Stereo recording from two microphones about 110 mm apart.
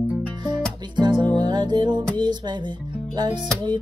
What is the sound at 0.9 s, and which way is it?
Music, 40° right (ahead or behind).